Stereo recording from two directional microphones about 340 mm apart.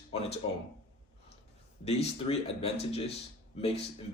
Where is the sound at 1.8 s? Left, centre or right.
Centre.